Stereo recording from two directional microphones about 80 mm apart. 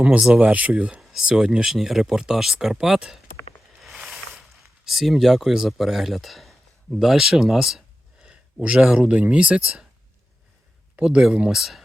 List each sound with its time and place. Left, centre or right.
0.2 s speech: centre
3.8 s a sound: centre
4.9 s speech: centre
11.0 s speech: centre